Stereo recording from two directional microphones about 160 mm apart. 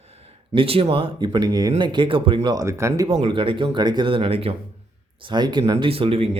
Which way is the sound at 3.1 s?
35° right (ahead or behind).